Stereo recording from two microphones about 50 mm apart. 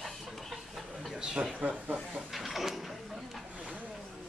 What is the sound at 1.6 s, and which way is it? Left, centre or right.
Speech, right.